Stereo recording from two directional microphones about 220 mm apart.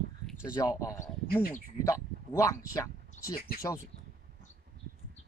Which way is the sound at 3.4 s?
40° left (ahead or behind).